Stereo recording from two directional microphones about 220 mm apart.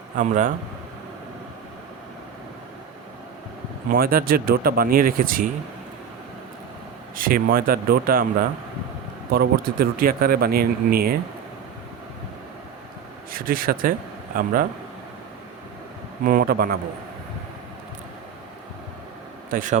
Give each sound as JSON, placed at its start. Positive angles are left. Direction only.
{"t": 0.2, "sound": "speech", "side_deg": -35}
{"t": 3.8, "sound": "speech", "side_deg": -40}
{"t": 7.2, "sound": "speech", "side_deg": -40}
{"t": 13.3, "sound": "speech", "side_deg": -40}
{"t": 16.2, "sound": "speech", "side_deg": -40}
{"t": 19.5, "sound": "speech", "side_deg": -35}